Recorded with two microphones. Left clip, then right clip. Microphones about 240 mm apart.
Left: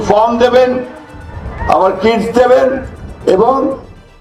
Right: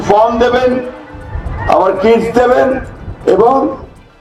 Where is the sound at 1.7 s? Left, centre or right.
Left.